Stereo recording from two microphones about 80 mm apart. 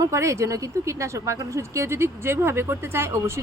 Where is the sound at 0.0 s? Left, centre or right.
Right.